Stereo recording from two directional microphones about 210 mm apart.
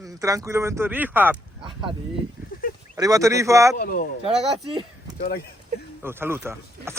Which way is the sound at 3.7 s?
45° left (ahead or behind).